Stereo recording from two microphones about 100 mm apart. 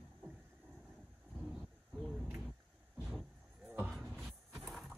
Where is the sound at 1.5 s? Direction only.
5° left (ahead or behind).